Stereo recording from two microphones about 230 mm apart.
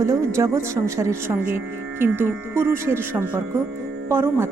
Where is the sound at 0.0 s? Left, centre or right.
Centre.